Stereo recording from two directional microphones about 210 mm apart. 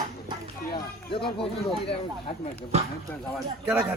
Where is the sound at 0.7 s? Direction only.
25° left (ahead or behind).